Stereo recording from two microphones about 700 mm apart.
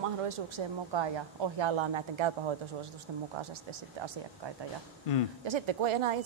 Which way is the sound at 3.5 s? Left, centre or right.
Right.